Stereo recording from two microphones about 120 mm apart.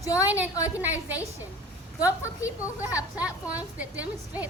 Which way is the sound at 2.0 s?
25° left (ahead or behind).